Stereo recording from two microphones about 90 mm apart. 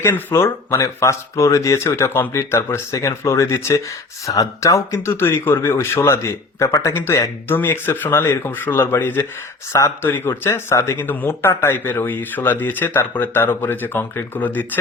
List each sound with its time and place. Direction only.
0.0 s speech: 30° left (ahead or behind)
6.9 s speech: 25° left (ahead or behind)
9.7 s speech: 35° left (ahead or behind)
10.1 s speech: 25° left (ahead or behind)